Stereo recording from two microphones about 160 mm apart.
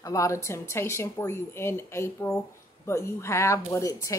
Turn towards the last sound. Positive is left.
turn(degrees=20)  # may be behind; listen again after turning